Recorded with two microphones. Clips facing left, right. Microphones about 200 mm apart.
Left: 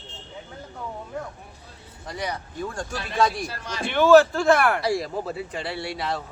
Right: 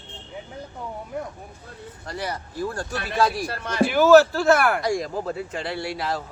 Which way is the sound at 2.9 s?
60° right (ahead or behind).